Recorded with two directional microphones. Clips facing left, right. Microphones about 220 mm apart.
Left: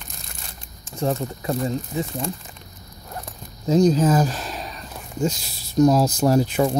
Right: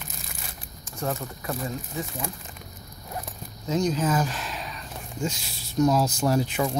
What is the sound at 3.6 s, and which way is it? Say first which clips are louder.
Speech: left 8 dB; 35° left (ahead or behind).